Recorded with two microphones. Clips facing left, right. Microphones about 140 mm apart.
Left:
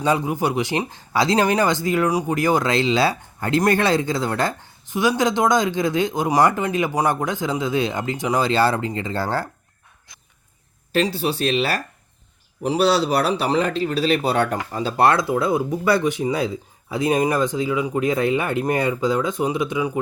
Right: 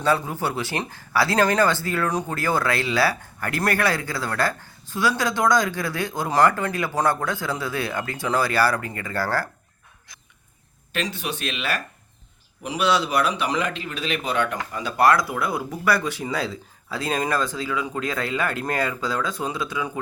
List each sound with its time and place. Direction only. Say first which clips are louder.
0.0 s speech: left 3 dB; 15° left (ahead or behind)
10.9 s speech: left 8 dB; 35° left (ahead or behind)